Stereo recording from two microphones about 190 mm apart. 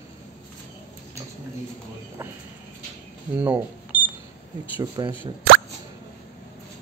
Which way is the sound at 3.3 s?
10° right (ahead or behind).